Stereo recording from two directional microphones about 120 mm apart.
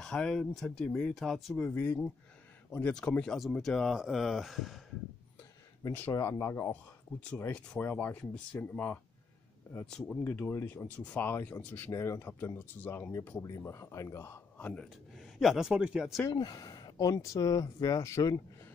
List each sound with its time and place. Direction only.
0.0 s speech: 5° left (ahead or behind)
1.7 s speech: 15° left (ahead or behind); by 4.8 s centre (ahead or behind)
5.9 s speech: 15° left (ahead or behind)
9.8 s speech: 5° left (ahead or behind)
10.2 s speech: 15° left (ahead or behind)
14.7 s speech: 5° left (ahead or behind)
16.3 s speech: 35° left (ahead or behind)